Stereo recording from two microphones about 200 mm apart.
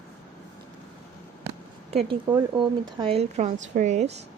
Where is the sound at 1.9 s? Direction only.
30° right (ahead or behind).